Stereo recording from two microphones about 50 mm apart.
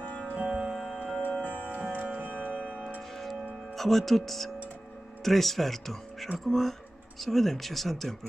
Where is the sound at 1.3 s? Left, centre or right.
Left.